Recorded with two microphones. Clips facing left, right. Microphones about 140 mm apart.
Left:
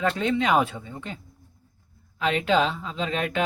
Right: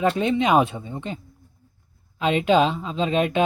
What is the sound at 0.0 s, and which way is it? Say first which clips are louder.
Speech: right 3 dB; 20° right (ahead or behind).